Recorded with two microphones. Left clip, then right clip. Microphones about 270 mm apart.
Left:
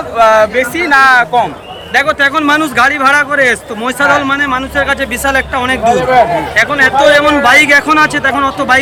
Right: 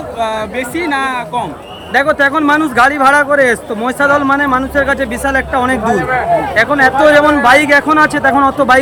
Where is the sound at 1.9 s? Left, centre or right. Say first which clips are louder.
Left 1 dB; centre.